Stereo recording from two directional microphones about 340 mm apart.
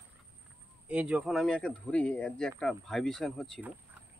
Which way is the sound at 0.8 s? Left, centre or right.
Centre.